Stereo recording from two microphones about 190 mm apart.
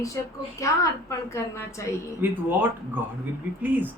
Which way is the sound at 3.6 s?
10° right (ahead or behind).